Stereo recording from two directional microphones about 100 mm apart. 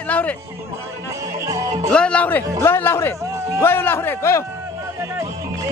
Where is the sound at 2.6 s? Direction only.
25° left (ahead or behind).